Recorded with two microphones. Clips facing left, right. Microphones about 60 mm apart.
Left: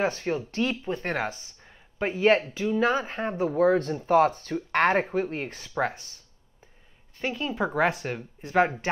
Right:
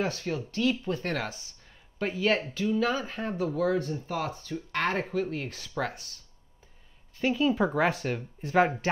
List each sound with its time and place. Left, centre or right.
0.3 s speech: left
1.0 s speech: left
2.1 s speech: left
3.7 s speech: left
5.1 s speech: left
7.2 s speech: centre